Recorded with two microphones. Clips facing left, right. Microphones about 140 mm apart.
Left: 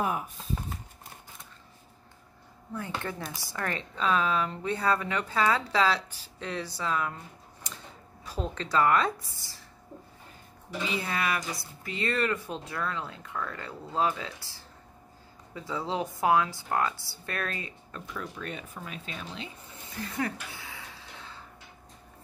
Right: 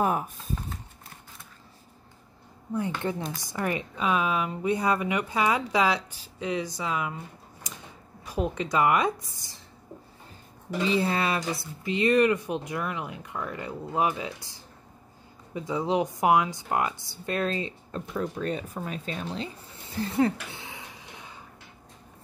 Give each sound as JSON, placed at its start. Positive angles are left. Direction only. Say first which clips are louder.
{"t": 3.0, "sound": "speech", "louder": "right 6 dB", "side_deg": -20}
{"t": 8.3, "sound": "speech", "louder": "right 4 dB", "side_deg": -15}
{"t": 10.9, "sound": "speech", "louder": "right 5 dB", "side_deg": -30}
{"t": 20.0, "sound": "a sound", "louder": "right 8 dB", "side_deg": -30}